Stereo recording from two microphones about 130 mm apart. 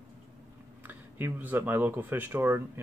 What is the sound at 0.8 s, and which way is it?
Speech, 15° right (ahead or behind).